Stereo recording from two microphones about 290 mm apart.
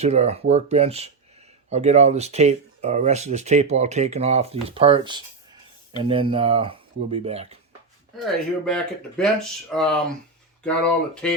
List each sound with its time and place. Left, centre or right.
0.0 s speech: right
8.1 s speech: centre